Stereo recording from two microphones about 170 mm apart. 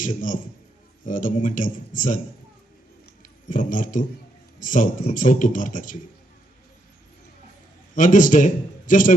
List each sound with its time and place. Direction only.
0.0 s speech: 50° left (ahead or behind)
3.5 s speech: 50° left (ahead or behind)
7.9 s speech: 50° left (ahead or behind)